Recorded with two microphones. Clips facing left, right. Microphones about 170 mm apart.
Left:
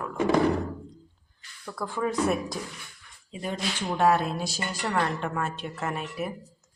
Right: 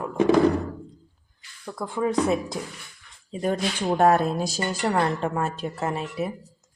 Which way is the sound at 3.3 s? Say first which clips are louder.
Right 6 dB; 45° right (ahead or behind).